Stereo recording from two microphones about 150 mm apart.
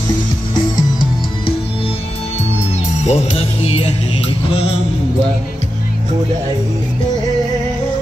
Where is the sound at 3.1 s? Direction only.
40° left (ahead or behind).